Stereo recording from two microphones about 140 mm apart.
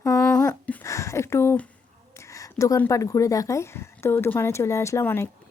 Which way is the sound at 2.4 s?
25° left (ahead or behind).